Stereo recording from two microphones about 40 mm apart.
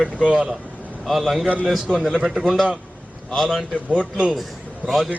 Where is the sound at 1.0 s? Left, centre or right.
Centre.